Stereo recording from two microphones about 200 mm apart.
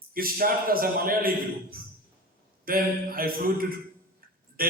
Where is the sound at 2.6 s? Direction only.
45° right (ahead or behind).